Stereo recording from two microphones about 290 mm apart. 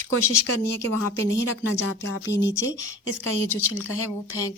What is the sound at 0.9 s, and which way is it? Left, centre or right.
A woman's voice, right.